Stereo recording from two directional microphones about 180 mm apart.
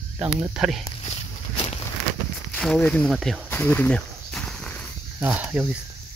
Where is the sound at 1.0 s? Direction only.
35° left (ahead or behind).